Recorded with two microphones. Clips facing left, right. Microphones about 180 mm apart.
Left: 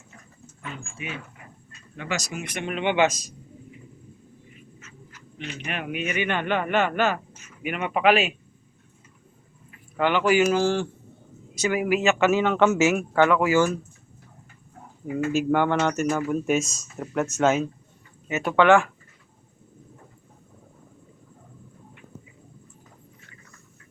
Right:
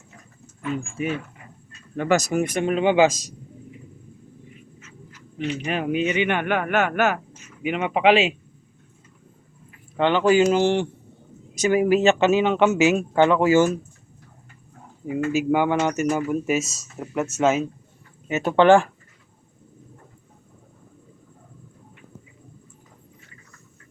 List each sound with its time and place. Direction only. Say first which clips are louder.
1.0 s speech: right 9 dB; 40° right (ahead or behind)
3.1 s a man's voice: right 3 dB; 90° right
5.5 s speech: right 6 dB; 30° right (ahead or behind)
10.0 s speech: right 3 dB; 25° right (ahead or behind)
15.0 s speech: right 1 dB; 5° right (ahead or behind)
18.3 s speech: right 3 dB; 25° right (ahead or behind)